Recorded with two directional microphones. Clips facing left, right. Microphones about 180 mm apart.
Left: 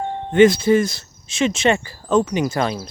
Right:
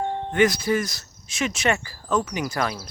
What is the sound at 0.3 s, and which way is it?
Speech, 25° left (ahead or behind).